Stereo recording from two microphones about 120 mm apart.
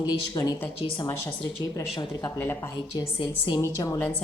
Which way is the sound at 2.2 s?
20° left (ahead or behind).